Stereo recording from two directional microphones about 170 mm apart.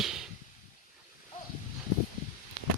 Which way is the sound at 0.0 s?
5° right (ahead or behind).